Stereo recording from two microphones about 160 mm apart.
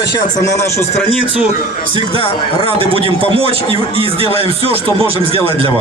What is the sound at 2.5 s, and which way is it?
A man's voice, 35° right (ahead or behind).